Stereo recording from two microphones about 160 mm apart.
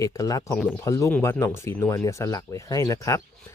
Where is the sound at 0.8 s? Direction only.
20° left (ahead or behind).